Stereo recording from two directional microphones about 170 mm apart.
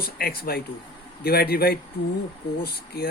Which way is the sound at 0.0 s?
65° left (ahead or behind).